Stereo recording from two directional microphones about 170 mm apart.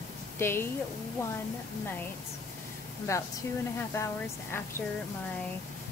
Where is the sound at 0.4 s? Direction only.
15° left (ahead or behind).